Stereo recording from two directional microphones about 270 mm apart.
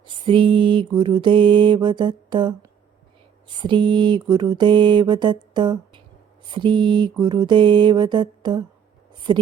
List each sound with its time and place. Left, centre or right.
0.0 s mantra: centre